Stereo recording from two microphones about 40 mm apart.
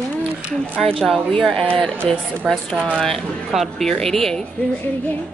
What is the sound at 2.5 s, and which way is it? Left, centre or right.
A woman's voice, centre.